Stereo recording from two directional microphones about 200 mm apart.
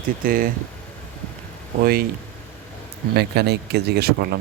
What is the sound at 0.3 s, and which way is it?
Speech, 45° right (ahead or behind).